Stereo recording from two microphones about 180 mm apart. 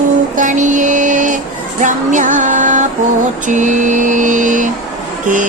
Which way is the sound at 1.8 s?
45° right (ahead or behind).